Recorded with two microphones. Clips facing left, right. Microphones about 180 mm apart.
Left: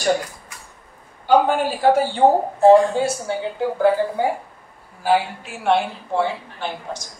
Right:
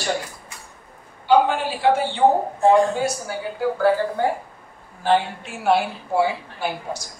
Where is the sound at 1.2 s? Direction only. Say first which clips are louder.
Left 1 dB; 45° left (ahead or behind); by 4.3 s 20° left (ahead or behind).